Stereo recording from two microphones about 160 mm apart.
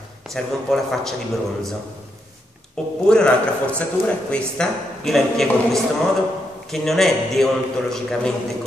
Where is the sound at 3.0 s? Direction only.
5° left (ahead or behind).